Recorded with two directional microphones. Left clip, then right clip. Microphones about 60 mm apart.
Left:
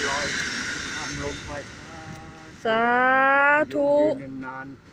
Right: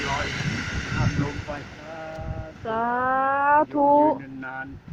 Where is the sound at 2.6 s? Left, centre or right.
Left.